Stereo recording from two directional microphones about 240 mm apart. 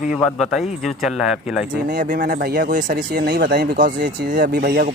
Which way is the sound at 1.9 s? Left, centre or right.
Right.